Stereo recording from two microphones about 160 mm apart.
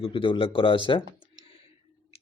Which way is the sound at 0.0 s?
30° left (ahead or behind).